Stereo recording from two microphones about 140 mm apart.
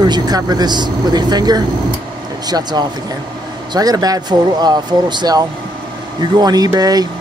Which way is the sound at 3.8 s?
25° right (ahead or behind).